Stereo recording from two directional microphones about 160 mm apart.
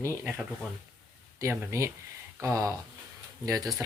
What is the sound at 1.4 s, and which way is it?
Speech, 15° right (ahead or behind).